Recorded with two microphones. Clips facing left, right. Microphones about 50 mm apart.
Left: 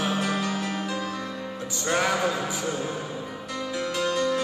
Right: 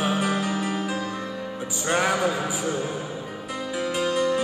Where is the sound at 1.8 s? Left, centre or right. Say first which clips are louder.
Right 2 dB; centre.